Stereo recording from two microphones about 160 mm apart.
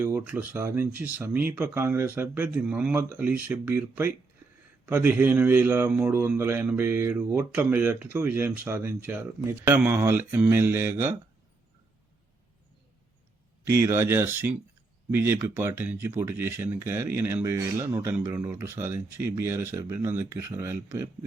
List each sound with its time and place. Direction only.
0.0 s a man's voice: 15° right (ahead or behind)
13.7 s a man's voice: 15° right (ahead or behind)